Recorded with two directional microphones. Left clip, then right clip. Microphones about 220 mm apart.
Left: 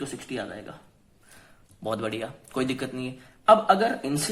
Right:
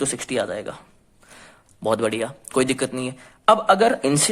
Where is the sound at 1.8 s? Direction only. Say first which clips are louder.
Right 8 dB; 35° right (ahead or behind).